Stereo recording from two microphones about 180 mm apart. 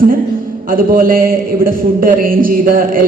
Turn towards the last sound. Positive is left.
turn(degrees=-50)  # may be behind; listen again after turning